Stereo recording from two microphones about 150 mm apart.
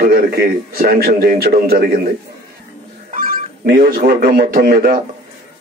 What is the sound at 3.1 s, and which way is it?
A man's voice, 65° right (ahead or behind).